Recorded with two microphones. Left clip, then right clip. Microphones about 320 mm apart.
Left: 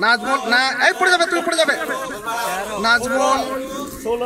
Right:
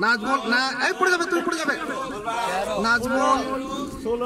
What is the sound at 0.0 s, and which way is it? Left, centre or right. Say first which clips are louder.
A man's voice: left 4 dB; centre.